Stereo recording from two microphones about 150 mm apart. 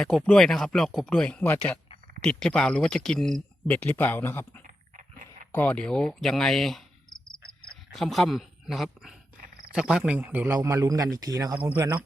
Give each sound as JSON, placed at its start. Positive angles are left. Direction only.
{"t": 0.0, "sound": "speech", "side_deg": 5}
{"t": 4.6, "sound": "a sound", "side_deg": -65}
{"t": 5.5, "sound": "speech", "side_deg": 10}
{"t": 7.9, "sound": "a man's voice", "side_deg": 0}
{"t": 11.5, "sound": "a man's voice", "side_deg": -15}